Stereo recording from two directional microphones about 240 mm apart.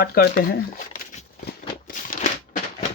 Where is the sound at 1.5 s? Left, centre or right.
Left.